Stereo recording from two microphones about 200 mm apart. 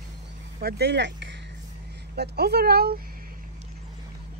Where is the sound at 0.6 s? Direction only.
50° right (ahead or behind).